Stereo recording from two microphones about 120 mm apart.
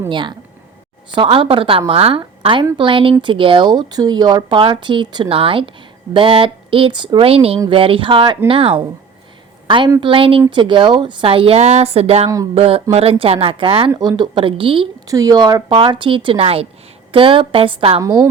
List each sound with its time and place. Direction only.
0.1 s a woman's voice: 40° right (ahead or behind)
13.9 s speech: 30° right (ahead or behind); by 14.8 s 45° right (ahead or behind)
15.0 s speech: 30° right (ahead or behind); by 18.0 s 50° right (ahead or behind)
18.0 s a woman's voice: 30° right (ahead or behind)